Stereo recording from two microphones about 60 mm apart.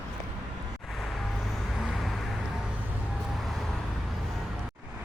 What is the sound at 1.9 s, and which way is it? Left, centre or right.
Vehicle, centre.